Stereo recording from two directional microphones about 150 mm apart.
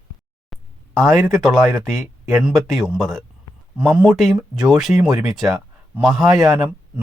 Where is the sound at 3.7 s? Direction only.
10° right (ahead or behind).